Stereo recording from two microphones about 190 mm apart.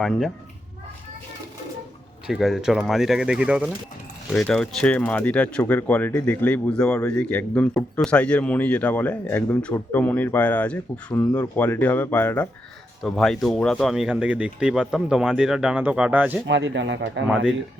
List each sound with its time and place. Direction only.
2.2 s speech: centre (ahead or behind)
16.5 s speech: 70° right (ahead or behind)